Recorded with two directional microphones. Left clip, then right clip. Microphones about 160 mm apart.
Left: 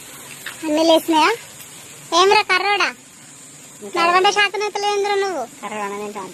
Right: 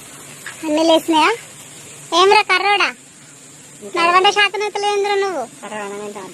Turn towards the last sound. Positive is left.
turn(degrees=45)  # may be behind; listen again after turning